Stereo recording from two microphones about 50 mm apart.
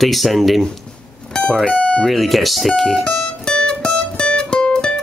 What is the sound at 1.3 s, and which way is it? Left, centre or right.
Music, centre.